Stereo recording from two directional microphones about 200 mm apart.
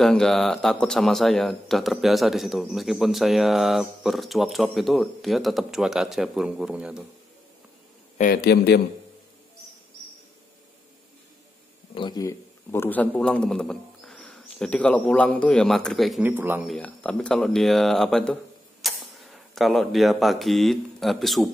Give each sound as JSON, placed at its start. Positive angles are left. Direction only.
{"t": 0.0, "sound": "speech", "side_deg": 0}
{"t": 8.2, "sound": "a man's voice", "side_deg": 45}
{"t": 11.9, "sound": "a man's voice", "side_deg": 20}
{"t": 16.7, "sound": "speech", "side_deg": 5}